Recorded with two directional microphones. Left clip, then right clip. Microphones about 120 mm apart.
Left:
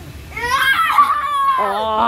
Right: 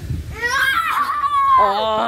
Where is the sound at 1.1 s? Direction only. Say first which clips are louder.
Right 1 dB; 15° left (ahead or behind).